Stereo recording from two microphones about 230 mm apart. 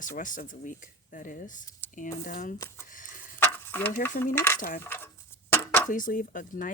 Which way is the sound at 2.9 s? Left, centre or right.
Left.